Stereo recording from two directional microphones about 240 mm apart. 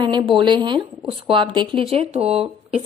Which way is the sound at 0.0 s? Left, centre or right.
Centre.